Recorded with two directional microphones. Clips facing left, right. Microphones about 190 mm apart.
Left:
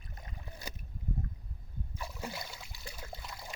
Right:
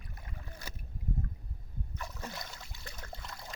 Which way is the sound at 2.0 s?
10° left (ahead or behind).